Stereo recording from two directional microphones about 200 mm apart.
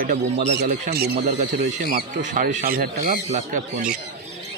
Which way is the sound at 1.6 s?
45° right (ahead or behind).